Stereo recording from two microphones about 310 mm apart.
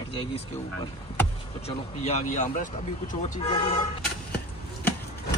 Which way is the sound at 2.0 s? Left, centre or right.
Left.